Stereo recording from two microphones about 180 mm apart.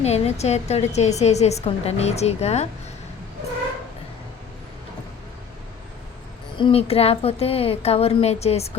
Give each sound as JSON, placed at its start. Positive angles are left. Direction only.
{"t": 0.0, "sound": "a woman's voice", "side_deg": 35}
{"t": 6.6, "sound": "a woman's voice", "side_deg": 30}